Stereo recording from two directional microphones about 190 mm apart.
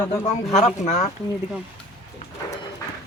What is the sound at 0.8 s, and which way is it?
Speech, 40° left (ahead or behind).